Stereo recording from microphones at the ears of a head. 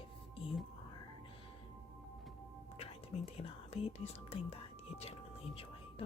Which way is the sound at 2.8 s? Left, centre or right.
Left.